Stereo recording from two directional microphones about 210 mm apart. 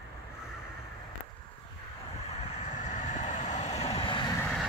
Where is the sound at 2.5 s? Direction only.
35° left (ahead or behind); by 4.5 s 20° left (ahead or behind).